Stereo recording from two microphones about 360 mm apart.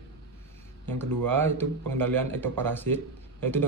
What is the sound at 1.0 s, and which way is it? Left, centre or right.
Speech, centre.